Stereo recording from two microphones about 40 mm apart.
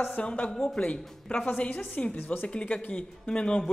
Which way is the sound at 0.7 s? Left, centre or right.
Left.